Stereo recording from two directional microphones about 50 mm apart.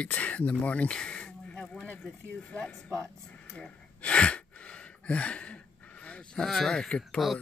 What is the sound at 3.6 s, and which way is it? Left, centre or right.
Gasp, left.